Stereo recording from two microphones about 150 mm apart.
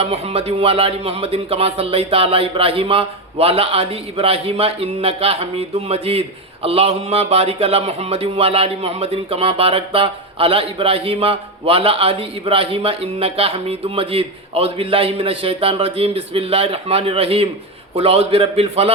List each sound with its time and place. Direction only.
0.0 s speech: 40° right (ahead or behind)